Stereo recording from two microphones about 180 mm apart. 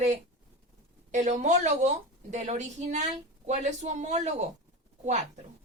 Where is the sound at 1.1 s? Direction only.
40° right (ahead or behind).